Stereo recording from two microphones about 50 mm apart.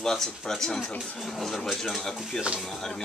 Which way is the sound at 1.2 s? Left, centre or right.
Centre.